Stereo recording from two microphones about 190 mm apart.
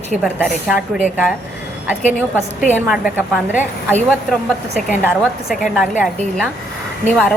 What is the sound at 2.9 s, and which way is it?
Speech, 5° right (ahead or behind).